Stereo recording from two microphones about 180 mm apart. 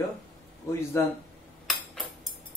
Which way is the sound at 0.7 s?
15° left (ahead or behind).